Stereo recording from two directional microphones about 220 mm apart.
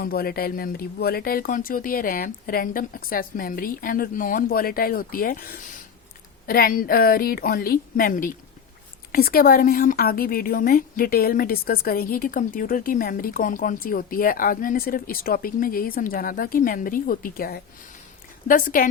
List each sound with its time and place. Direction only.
0.0 s speech: 45° left (ahead or behind)